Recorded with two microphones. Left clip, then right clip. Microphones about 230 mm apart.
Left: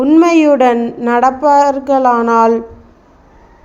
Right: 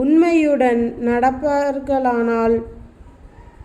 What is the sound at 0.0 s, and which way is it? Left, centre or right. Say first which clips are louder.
Speech: left 6 dB; centre.